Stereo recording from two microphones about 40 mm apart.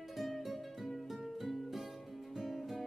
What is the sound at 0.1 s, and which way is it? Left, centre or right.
Music, centre.